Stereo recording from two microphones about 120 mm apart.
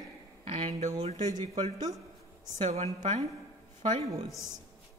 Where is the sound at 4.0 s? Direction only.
60° right (ahead or behind).